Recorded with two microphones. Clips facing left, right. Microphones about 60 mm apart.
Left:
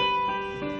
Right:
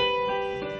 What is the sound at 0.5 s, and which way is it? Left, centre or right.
Music, centre.